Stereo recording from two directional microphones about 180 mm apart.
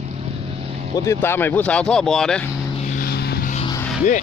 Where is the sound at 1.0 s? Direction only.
10° left (ahead or behind).